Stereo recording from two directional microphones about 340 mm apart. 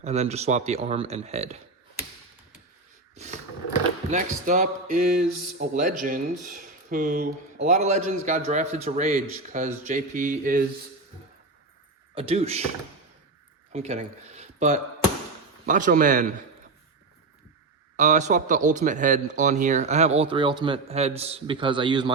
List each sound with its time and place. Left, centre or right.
0.0 s speech: centre
3.2 s a sound: centre
4.1 s speech: right
12.1 s speech: centre
13.7 s speech: centre
17.9 s speech: right